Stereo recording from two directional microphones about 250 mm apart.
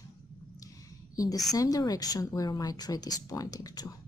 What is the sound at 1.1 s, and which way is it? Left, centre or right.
A woman's voice, centre.